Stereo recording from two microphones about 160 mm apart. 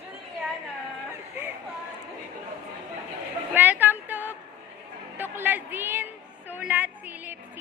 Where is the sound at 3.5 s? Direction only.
10° right (ahead or behind).